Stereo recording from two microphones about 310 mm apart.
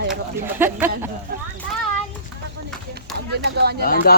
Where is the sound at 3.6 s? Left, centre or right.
Right.